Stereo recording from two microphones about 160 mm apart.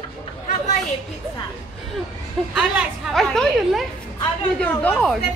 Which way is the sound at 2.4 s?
5° left (ahead or behind).